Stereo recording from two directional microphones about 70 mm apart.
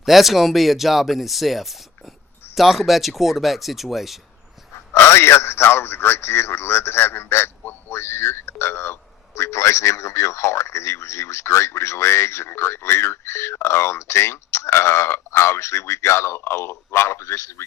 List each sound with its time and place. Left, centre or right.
0.0 s speech: centre
4.9 s a man's voice: left